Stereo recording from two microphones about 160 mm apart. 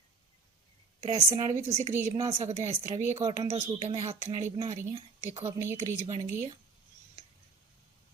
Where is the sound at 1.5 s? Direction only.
45° right (ahead or behind).